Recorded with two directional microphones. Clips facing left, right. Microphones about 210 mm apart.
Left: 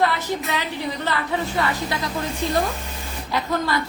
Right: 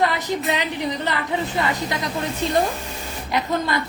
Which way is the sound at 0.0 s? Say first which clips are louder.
Right 1 dB; 15° right (ahead or behind).